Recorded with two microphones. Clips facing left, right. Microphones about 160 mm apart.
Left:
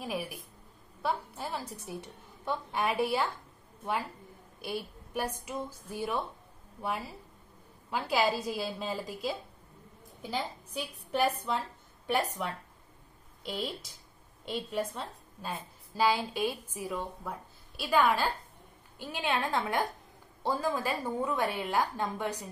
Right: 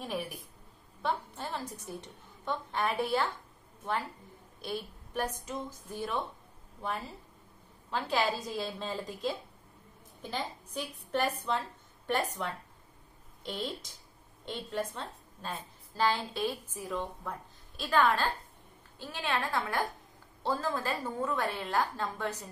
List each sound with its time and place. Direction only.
0.0 s a woman's voice: 5° left (ahead or behind)
4.6 s a woman's voice: 10° left (ahead or behind)